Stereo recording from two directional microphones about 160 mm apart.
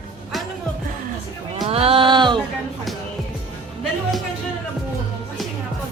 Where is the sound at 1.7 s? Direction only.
35° right (ahead or behind).